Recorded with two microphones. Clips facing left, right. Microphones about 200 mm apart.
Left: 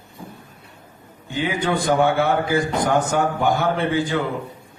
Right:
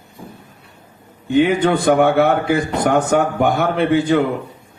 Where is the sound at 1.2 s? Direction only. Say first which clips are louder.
Right 9 dB; 65° right (ahead or behind).